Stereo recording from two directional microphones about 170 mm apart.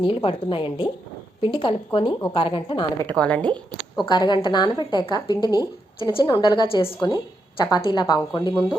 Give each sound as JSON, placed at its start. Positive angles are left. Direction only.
{"t": 0.0, "sound": "a woman's voice", "side_deg": 30}
{"t": 3.1, "sound": "a woman's voice", "side_deg": 10}
{"t": 4.0, "sound": "a woman's voice", "side_deg": 25}